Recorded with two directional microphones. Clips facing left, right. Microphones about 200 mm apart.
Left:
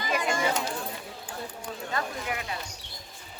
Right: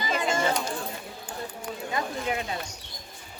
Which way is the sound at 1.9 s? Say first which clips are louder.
Right 3 dB; 15° right (ahead or behind).